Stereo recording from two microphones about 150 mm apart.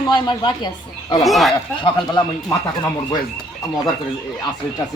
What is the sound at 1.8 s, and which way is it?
Speech, 30° left (ahead or behind).